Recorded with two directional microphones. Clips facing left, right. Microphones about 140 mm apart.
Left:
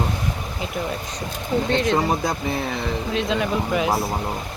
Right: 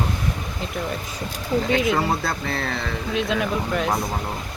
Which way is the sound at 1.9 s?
15° left (ahead or behind).